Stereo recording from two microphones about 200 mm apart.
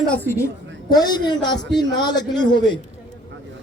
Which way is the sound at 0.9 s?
20° left (ahead or behind).